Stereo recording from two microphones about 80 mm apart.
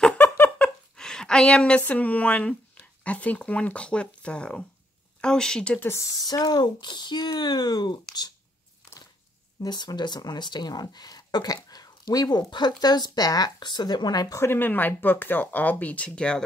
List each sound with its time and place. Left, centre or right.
0.2 s a sound: left
0.9 s a sound: centre
1.9 s speech: centre
5.8 s speech: left
9.7 s speech: left
14.3 s speech: left
14.6 s speech: left